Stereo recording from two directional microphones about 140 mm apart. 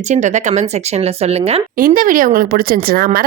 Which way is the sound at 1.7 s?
80° right.